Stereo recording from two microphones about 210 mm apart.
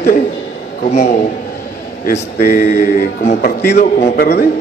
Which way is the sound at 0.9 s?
30° left (ahead or behind).